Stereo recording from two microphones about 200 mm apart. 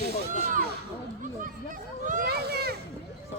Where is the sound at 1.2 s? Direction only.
40° right (ahead or behind).